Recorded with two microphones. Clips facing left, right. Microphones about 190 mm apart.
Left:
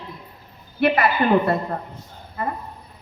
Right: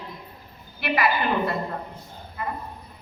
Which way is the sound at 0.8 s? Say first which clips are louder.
Left 5 dB; 55° left (ahead or behind).